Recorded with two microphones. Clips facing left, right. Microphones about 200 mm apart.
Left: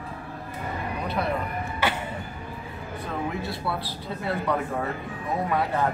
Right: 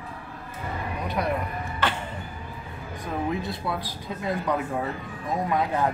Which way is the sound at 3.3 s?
20° right (ahead or behind).